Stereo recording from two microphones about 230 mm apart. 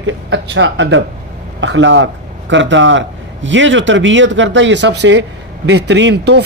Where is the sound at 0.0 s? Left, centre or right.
Right.